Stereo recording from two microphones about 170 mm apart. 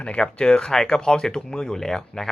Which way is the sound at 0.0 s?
5° left (ahead or behind).